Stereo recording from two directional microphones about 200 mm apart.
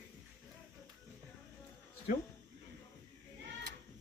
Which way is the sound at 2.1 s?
45° left (ahead or behind).